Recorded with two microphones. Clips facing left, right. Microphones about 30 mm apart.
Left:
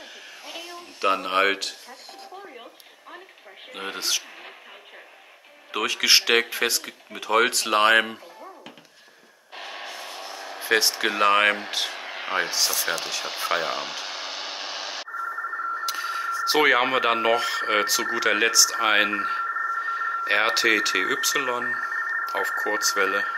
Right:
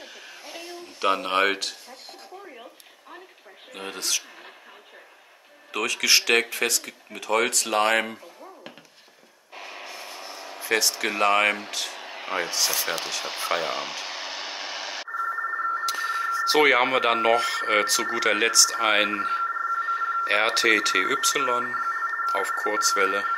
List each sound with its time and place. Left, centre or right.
0.5 s a sound: centre
1.0 s speech: centre
2.5 s a sound: left
3.7 s speech: centre
5.7 s speech: centre
9.6 s radio: left
10.3 s vehicle: left
11.1 s speech: centre
11.5 s speech: left
12.4 s speech: centre
13.0 s a sound: centre
15.1 s telephone bell ringing: centre
15.8 s a sound: centre
16.4 s speech: centre